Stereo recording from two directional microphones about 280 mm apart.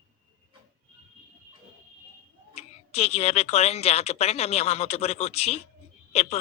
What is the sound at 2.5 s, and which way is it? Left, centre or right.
Speech, left.